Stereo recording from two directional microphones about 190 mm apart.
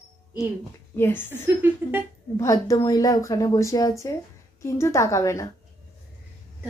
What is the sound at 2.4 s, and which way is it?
A woman's voice, 15° left (ahead or behind).